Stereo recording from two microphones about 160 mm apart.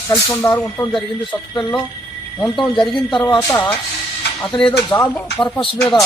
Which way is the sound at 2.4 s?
Centre (ahead or behind).